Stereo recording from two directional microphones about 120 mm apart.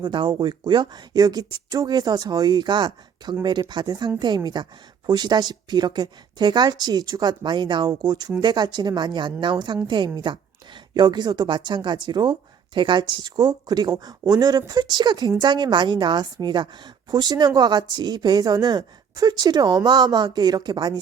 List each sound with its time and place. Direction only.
0.0 s a woman's voice: 40° right (ahead or behind)